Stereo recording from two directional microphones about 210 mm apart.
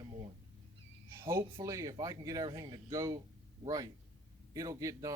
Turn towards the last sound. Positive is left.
turn(degrees=-15)  # may be behind; listen again after turning